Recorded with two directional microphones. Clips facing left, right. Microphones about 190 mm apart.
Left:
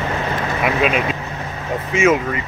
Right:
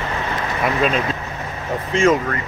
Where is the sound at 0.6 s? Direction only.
10° left (ahead or behind).